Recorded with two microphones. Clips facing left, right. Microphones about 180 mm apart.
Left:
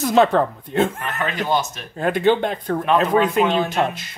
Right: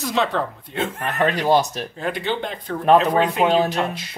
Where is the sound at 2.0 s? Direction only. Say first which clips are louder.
Left 8 dB; 50° left (ahead or behind).